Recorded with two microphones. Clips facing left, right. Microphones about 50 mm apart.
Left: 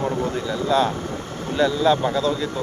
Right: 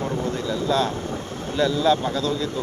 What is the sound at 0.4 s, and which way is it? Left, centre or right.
Speech, centre.